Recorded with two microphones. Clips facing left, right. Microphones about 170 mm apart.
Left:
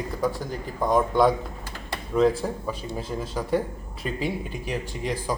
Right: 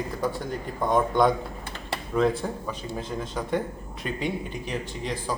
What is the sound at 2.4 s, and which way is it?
A man's voice, 5° left (ahead or behind).